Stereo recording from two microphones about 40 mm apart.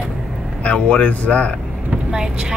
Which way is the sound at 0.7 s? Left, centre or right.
Left.